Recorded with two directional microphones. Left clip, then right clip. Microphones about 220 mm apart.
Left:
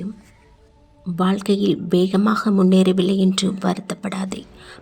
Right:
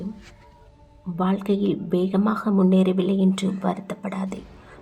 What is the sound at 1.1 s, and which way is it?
Speech, 40° left (ahead or behind).